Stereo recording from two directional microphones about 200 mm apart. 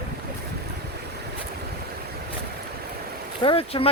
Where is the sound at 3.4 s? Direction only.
30° left (ahead or behind).